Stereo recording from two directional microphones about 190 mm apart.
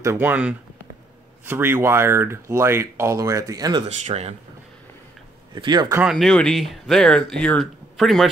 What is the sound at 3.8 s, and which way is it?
Speech, 35° right (ahead or behind).